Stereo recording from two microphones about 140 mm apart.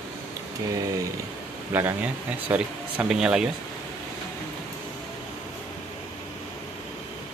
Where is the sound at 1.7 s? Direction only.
15° right (ahead or behind).